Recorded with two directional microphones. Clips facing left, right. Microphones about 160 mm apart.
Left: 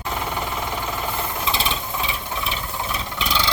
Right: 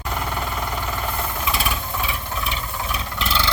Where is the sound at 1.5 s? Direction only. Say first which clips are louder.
Even; 25° left (ahead or behind).